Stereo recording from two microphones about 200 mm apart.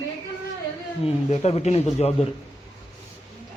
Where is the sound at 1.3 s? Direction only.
30° left (ahead or behind).